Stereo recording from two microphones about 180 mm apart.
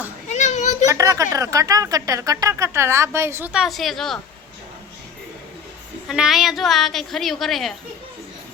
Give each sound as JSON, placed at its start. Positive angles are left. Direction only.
{"t": 0.3, "sound": "children playing", "side_deg": 40}
{"t": 0.9, "sound": "speech", "side_deg": -15}
{"t": 6.1, "sound": "a woman's voice", "side_deg": 0}